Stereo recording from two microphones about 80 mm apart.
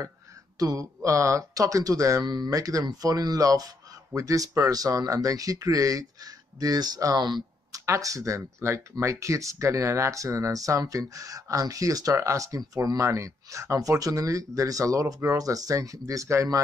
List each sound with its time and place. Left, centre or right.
0.6 s speech: right
7.2 s speech: right
7.7 s speech: right